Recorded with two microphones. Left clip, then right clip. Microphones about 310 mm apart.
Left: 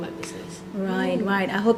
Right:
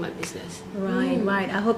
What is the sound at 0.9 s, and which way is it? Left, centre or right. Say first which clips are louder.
Speech: even; left.